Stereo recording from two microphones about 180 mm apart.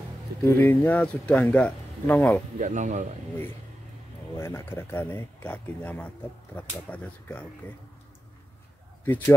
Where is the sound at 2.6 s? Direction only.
45° right (ahead or behind).